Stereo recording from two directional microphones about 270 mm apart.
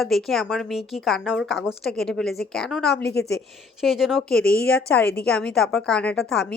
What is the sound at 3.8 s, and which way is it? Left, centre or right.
A woman's voice, centre.